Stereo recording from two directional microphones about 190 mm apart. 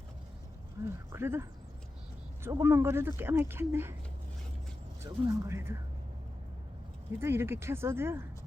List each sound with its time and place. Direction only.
0.9 s speech: 15° right (ahead or behind)
5.0 s speech: 20° right (ahead or behind)
7.2 s speech: 10° right (ahead or behind)